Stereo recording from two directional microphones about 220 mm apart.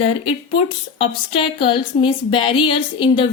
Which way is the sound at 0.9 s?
25° left (ahead or behind).